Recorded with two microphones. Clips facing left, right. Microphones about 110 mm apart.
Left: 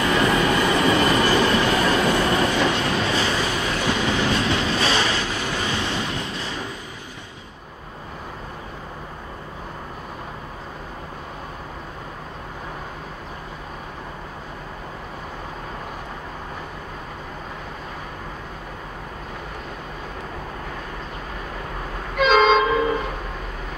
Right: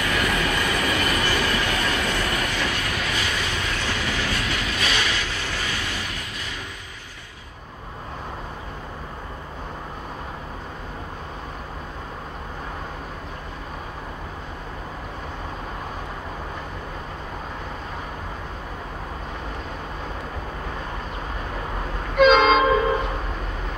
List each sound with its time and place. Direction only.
0.0 s train: 30° left (ahead or behind)
22.1 s train: centre (ahead or behind)